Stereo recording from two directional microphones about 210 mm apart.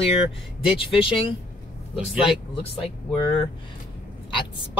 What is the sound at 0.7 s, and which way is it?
Speech, 25° left (ahead or behind).